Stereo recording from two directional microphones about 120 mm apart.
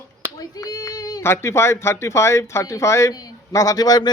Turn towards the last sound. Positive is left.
turn(degrees=35)  # may be behind; listen again after turning